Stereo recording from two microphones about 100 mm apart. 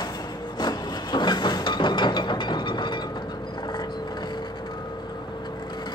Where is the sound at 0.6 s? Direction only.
45° left (ahead or behind).